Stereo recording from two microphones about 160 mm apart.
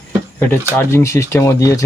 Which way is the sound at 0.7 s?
15° left (ahead or behind).